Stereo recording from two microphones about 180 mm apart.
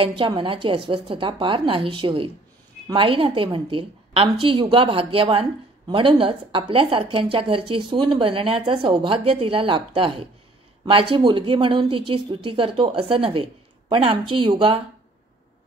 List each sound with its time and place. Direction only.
0.0 s a woman's voice: 25° right (ahead or behind)